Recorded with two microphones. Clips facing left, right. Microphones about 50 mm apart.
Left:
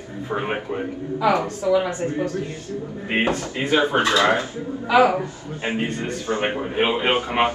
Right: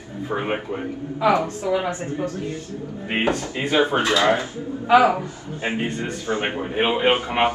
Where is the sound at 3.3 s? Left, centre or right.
Right.